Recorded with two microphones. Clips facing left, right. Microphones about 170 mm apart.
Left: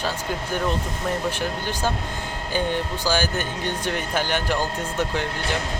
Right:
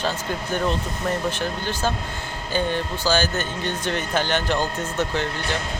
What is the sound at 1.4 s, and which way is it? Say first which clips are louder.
Speech: right 1 dB; 15° left (ahead or behind).